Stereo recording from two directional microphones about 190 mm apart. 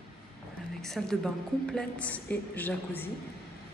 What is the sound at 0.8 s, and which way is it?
A woman's voice, centre (ahead or behind).